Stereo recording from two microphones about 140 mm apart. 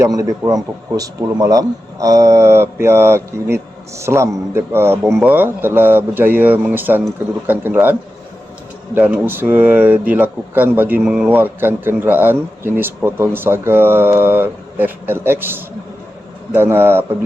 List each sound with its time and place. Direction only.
0.0 s speech: 25° right (ahead or behind)
9.0 s speech: 15° right (ahead or behind)